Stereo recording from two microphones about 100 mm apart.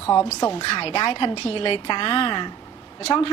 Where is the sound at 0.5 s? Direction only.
65° left (ahead or behind).